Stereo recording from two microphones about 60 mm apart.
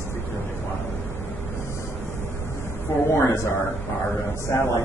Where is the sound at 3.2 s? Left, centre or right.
Left.